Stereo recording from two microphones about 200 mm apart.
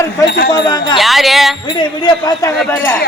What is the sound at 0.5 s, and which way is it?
Speech, 20° left (ahead or behind).